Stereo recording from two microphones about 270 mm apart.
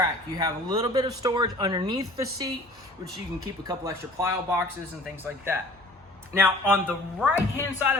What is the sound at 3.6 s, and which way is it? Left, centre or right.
Speech, centre.